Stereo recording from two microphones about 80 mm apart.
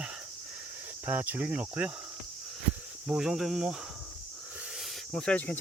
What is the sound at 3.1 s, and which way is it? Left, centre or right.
Speech, centre.